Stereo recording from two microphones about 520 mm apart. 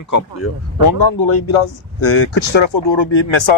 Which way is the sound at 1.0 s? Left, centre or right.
Left.